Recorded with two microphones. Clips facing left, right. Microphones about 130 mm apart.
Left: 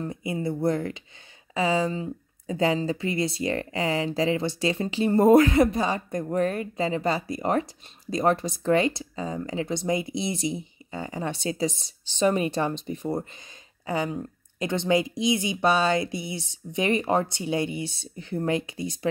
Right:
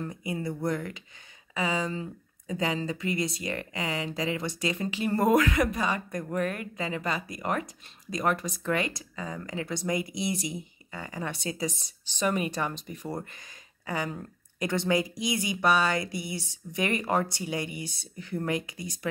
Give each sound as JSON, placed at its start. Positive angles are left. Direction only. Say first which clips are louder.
{"t": 0.0, "sound": "speech", "louder": "left 4 dB", "side_deg": 25}